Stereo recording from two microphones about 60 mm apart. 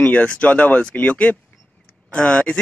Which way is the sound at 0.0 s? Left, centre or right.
Left.